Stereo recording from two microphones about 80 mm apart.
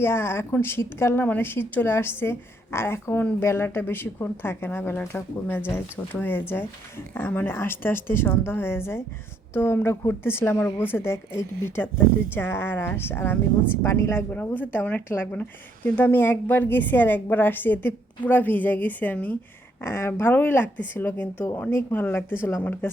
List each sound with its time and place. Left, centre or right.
0.0 s speech: left
19.8 s speech: left